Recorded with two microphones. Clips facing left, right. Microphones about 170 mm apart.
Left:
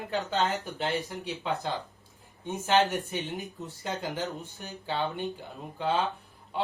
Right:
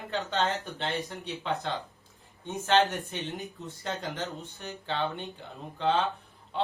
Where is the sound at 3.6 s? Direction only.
5° left (ahead or behind).